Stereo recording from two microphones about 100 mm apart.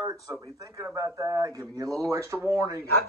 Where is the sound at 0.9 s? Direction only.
35° right (ahead or behind).